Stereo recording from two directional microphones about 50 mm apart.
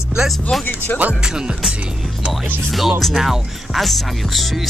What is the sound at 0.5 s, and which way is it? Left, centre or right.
Speech, centre.